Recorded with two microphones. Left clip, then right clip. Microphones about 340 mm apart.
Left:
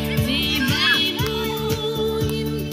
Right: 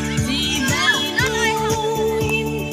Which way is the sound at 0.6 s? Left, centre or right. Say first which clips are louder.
Right 1 dB; centre.